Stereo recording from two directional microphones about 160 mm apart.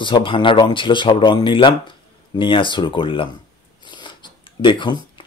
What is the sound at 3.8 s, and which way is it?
Shuffling cards, 30° left (ahead or behind).